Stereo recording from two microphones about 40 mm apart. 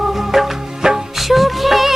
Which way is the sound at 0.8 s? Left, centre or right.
Centre.